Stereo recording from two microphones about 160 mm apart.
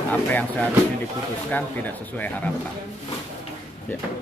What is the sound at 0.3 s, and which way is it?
Speech, 10° left (ahead or behind).